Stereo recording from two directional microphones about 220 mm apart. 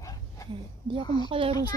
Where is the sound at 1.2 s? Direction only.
25° right (ahead or behind).